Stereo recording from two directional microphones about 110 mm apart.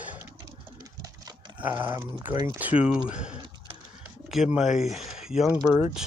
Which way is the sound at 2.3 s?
40° right (ahead or behind).